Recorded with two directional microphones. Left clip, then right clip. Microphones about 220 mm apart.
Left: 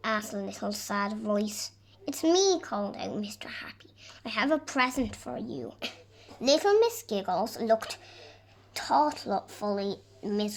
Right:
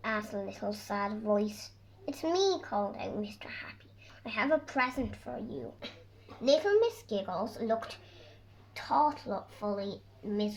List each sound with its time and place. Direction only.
0.0 s a child's voice: 30° left (ahead or behind)